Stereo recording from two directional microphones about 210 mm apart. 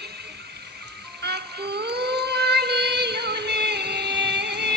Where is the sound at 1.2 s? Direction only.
50° right (ahead or behind).